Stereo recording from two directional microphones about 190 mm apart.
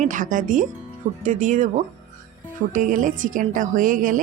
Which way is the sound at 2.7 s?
45° right (ahead or behind).